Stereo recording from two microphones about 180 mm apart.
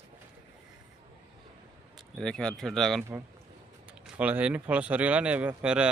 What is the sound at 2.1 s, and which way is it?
Speech, 5° left (ahead or behind).